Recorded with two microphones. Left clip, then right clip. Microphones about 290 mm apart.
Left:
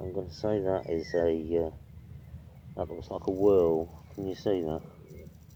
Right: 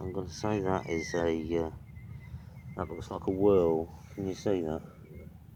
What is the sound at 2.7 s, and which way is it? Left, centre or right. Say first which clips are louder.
Speech: left 2 dB; right.